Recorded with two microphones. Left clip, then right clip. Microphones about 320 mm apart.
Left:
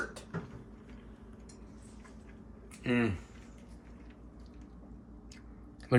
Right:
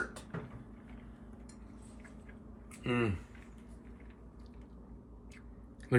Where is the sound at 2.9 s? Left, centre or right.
Centre.